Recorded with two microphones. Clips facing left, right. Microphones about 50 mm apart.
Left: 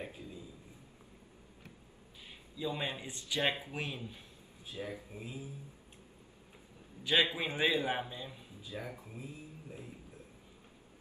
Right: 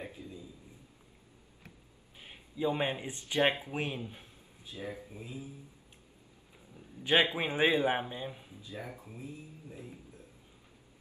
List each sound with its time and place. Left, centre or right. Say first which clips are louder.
0.0 s a sound: right 1 dB; left
2.2 s a man's voice: right 6 dB; right
4.8 s speech: right 1 dB; centre
5.1 s a sound: right 1 dB; left
7.0 s a man's voice: right 3 dB; right
8.8 s speech: even; right